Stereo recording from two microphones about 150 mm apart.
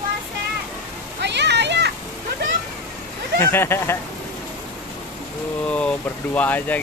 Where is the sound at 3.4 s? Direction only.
15° left (ahead or behind).